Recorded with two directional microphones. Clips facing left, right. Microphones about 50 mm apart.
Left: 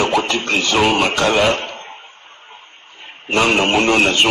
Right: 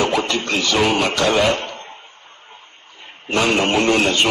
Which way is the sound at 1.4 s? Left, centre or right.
Left.